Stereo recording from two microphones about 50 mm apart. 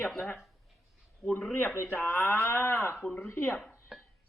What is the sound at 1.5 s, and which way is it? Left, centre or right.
Speech, left.